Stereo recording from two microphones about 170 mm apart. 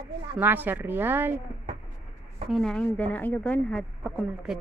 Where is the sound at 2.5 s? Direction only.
5° left (ahead or behind).